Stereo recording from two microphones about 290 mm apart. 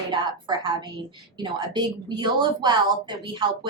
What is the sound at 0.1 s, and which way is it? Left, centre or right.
A woman's voice, centre.